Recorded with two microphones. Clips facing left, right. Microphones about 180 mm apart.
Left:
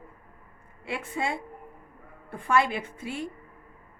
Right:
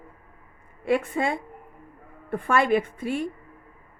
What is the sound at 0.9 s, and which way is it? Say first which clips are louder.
A woman's voice: right 7 dB; 50° right (ahead or behind).